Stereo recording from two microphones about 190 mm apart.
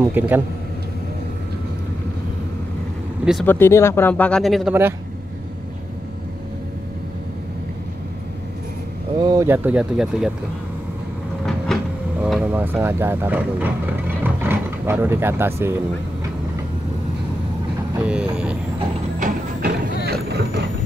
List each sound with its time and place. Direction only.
0.0 s speech: 10° right (ahead or behind)
3.4 s speech: 10° left (ahead or behind)
9.2 s speech: 20° right (ahead or behind)
11.4 s vehicle: centre (ahead or behind)
18.0 s vehicle: 5° right (ahead or behind)
19.1 s a sound: 45° right (ahead or behind)
20.1 s boat: 55° right (ahead or behind)